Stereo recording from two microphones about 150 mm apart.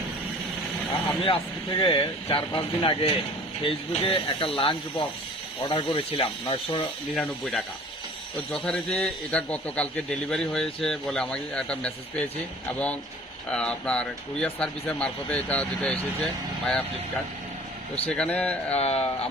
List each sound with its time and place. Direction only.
1.8 s speech: 35° left (ahead or behind)
7.2 s a man's voice: 5° left (ahead or behind)
13.5 s a man's voice: 5° left (ahead or behind)
18.0 s a man's voice: 10° left (ahead or behind)
18.8 s speech: 40° left (ahead or behind)